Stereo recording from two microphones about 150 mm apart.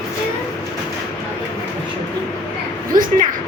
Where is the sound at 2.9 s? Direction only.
65° right (ahead or behind).